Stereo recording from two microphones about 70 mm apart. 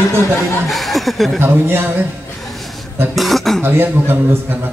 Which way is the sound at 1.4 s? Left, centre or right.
Right.